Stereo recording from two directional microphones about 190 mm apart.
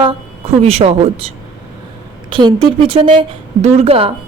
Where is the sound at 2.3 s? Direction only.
25° right (ahead or behind).